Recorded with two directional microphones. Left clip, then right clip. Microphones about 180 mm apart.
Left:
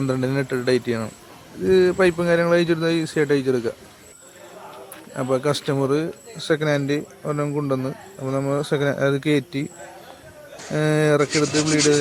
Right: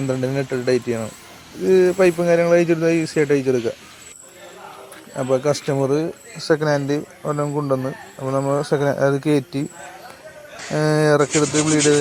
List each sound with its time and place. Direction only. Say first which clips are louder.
0.1 s speech: right 2 dB; centre (ahead or behind)
5.1 s speech: right 3 dB; centre (ahead or behind)
6.4 s a man's voice: right 3 dB; 15° left (ahead or behind)
6.7 s speech: right 2 dB; centre (ahead or behind)
10.8 s speech: right 2 dB; centre (ahead or behind)